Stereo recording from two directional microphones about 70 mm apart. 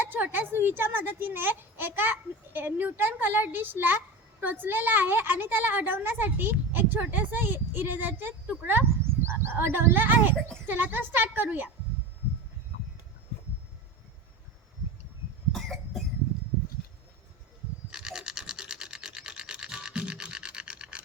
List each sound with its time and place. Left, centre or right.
0.0 s a woman's voice: right
15.5 s cough: centre
17.9 s a sound: centre